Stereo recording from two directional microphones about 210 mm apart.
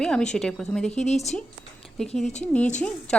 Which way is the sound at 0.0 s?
5° left (ahead or behind).